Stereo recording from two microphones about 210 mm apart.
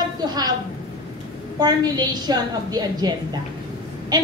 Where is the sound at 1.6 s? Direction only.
20° right (ahead or behind).